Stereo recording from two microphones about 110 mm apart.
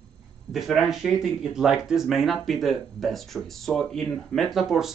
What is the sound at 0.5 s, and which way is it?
Speech, centre (ahead or behind).